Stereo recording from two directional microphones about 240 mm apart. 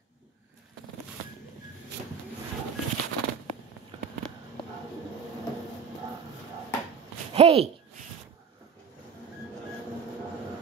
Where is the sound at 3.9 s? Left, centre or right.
Right.